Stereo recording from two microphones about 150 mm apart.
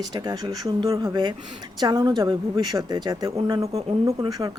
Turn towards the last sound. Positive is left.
turn(degrees=-25)  # may be behind; listen again after turning